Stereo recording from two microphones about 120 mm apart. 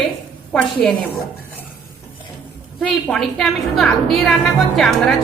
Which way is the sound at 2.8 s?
5° left (ahead or behind).